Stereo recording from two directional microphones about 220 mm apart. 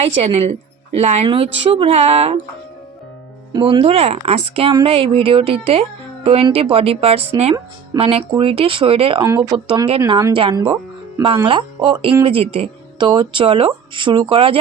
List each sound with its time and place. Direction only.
0.0 s speech: 30° right (ahead or behind)
3.5 s speech: 20° right (ahead or behind)